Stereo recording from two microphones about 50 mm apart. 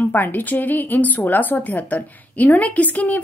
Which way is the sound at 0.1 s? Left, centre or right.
Left.